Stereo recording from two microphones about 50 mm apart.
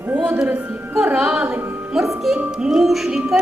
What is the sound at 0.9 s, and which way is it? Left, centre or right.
Music, centre.